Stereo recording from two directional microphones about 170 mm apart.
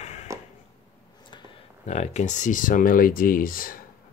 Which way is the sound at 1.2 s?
30° left (ahead or behind).